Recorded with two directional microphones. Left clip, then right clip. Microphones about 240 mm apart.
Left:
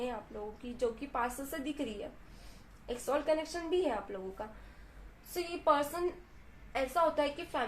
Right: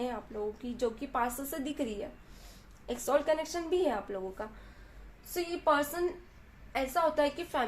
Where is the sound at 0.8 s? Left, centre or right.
Right.